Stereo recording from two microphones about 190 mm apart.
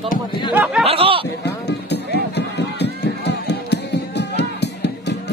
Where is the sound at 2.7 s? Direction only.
60° left (ahead or behind).